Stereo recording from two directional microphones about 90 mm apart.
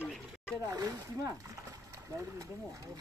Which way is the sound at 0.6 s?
40° right (ahead or behind).